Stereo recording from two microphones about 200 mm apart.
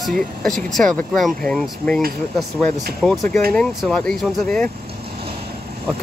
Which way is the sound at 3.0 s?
5° left (ahead or behind).